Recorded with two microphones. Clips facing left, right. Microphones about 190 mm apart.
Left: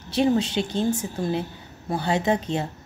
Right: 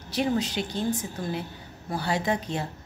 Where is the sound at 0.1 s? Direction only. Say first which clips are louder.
Left 5 dB; 25° left (ahead or behind).